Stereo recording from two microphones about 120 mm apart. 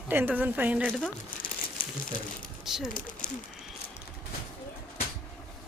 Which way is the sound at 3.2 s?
90° left.